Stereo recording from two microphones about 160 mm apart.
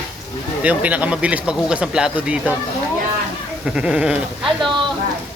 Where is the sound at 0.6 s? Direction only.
10° right (ahead or behind).